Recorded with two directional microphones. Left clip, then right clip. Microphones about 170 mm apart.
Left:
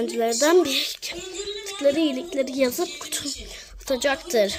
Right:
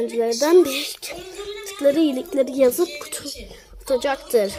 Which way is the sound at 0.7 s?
Centre (ahead or behind).